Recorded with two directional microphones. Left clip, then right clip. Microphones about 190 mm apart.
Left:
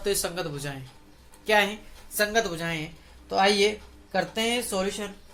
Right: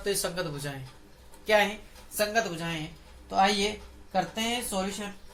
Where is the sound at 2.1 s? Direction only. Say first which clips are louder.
Left 3 dB; 50° left (ahead or behind).